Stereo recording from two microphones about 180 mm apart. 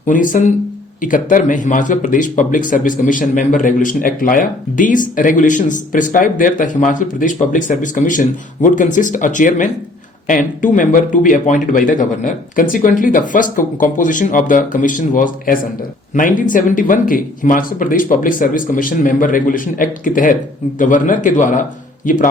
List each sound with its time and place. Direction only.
0.0 s a man's voice: 45° left (ahead or behind)